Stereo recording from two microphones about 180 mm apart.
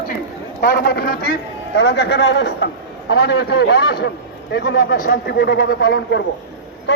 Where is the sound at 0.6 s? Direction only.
65° left (ahead or behind).